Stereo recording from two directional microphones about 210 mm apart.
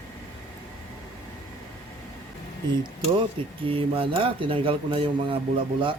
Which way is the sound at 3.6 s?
25° right (ahead or behind).